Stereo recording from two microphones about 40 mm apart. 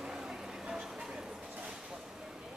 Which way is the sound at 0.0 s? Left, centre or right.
Centre.